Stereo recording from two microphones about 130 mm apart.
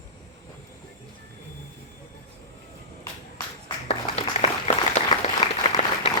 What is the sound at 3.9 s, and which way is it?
Applause, 50° left (ahead or behind).